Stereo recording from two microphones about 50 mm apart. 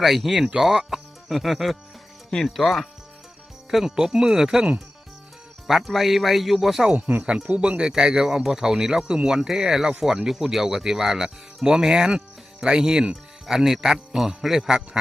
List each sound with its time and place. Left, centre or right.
0.0 s speech: centre
5.6 s speech: centre
6.9 s speech: right; by 14.8 s centre